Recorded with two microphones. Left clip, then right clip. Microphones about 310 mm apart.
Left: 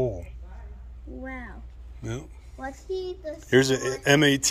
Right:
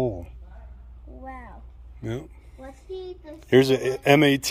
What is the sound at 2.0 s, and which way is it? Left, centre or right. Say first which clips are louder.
Speech: right 3 dB; right.